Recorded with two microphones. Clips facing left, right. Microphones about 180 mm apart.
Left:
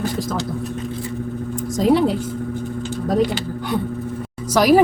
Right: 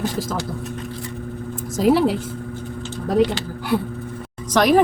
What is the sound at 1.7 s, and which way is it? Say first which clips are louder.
Speech: even; 5° right (ahead or behind).